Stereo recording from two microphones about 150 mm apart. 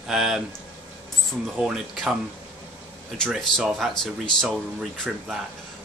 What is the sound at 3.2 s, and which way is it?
Speech, centre (ahead or behind).